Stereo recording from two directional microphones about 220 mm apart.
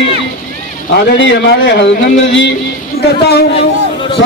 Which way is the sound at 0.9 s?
55° left (ahead or behind).